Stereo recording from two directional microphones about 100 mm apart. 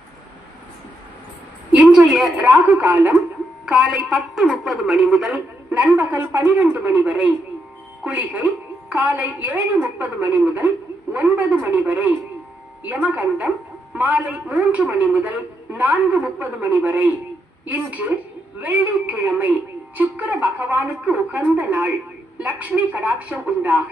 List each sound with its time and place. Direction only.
1.8 s a sound: 15° right (ahead or behind)
2.3 s a woman's voice: 15° right (ahead or behind)
3.6 s a woman's voice: 5° right (ahead or behind)